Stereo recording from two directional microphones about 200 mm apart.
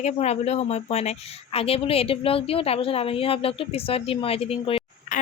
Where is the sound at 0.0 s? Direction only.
35° left (ahead or behind).